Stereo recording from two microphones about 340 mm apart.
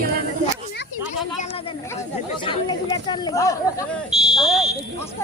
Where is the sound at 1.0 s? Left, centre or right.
Centre.